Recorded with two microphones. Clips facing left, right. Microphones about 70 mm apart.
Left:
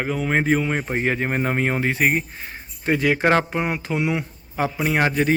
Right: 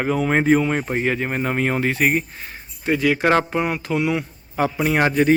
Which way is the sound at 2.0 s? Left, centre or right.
Centre.